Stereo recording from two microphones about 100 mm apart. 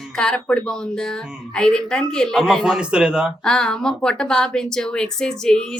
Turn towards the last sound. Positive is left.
turn(degrees=5)  # may be behind; listen again after turning